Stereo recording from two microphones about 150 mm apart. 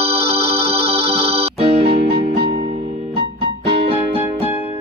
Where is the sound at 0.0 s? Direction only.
40° right (ahead or behind).